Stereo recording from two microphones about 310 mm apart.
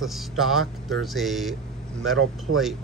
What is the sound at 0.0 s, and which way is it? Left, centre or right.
Speech, centre.